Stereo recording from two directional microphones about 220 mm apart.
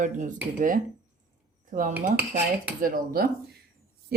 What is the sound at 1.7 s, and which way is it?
A woman's voice, 35° right (ahead or behind).